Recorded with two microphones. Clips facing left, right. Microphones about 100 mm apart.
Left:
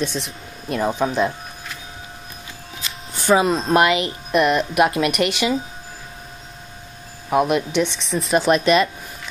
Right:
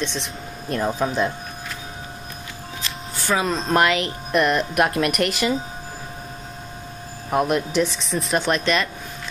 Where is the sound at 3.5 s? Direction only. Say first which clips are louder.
Left 3 dB; centre (ahead or behind).